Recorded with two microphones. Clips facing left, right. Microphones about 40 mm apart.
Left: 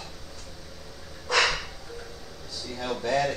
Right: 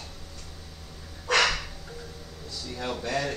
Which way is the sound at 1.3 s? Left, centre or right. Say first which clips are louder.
Right 1 dB; right.